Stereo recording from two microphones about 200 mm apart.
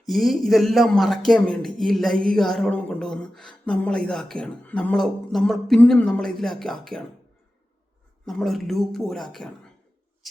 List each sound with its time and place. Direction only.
0.0 s speech: centre (ahead or behind)
8.3 s speech: centre (ahead or behind)